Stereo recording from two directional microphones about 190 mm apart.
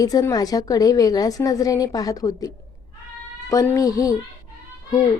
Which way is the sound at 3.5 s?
20° left (ahead or behind).